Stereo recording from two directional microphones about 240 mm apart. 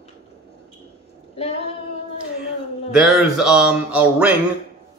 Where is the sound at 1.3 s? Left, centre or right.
Left.